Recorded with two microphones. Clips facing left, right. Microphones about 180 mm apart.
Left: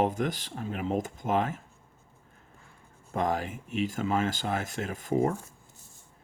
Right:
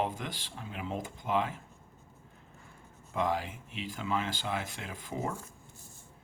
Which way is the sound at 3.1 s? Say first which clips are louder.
Left 3 dB; 45° left (ahead or behind).